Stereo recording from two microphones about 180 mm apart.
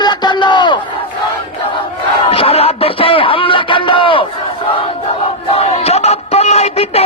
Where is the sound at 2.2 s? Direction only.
30° left (ahead or behind).